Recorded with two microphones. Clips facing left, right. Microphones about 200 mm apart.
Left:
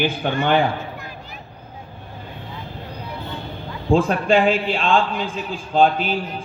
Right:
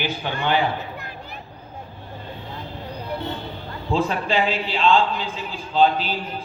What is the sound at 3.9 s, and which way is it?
A man's voice, 50° left (ahead or behind).